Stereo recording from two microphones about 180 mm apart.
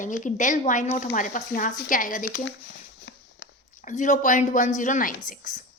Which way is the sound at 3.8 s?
45° left (ahead or behind).